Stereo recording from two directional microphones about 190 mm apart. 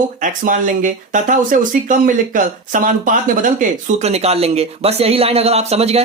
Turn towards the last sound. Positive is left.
turn(degrees=-35)  # may be behind; listen again after turning